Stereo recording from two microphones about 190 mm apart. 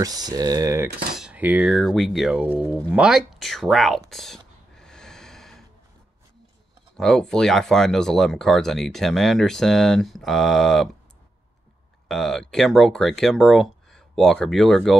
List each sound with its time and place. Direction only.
0.0 s speech: 20° right (ahead or behind)
1.1 s speech: 5° right (ahead or behind)
4.1 s snort: centre (ahead or behind)
7.0 s speech: centre (ahead or behind)
12.1 s speech: centre (ahead or behind)